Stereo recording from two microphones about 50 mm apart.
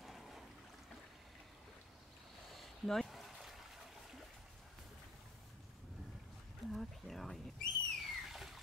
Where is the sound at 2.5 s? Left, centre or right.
Centre.